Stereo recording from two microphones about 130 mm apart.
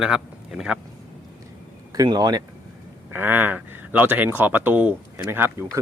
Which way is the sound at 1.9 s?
30° right (ahead or behind).